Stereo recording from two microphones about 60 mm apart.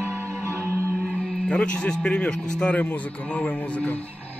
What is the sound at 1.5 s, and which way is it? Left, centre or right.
A man's voice, centre.